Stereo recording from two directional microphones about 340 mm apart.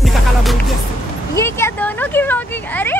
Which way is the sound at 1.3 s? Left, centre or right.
Centre.